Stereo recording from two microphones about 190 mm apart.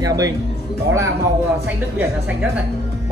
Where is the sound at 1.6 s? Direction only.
10° right (ahead or behind).